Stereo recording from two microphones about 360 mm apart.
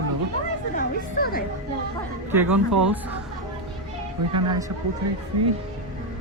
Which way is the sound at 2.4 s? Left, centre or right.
Right.